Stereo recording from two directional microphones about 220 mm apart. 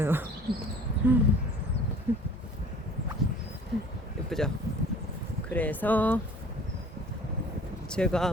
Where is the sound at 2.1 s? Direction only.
10° right (ahead or behind).